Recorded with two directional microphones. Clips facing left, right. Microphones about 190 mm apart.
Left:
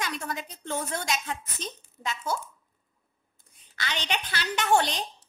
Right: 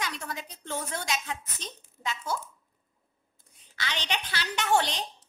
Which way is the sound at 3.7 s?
50° left (ahead or behind).